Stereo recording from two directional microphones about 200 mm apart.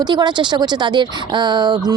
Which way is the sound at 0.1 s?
20° right (ahead or behind).